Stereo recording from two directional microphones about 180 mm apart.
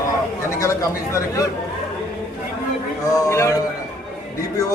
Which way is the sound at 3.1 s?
15° left (ahead or behind).